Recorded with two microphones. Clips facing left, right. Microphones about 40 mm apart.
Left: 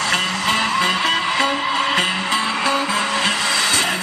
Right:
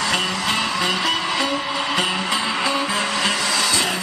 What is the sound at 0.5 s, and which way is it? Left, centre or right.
Music, left.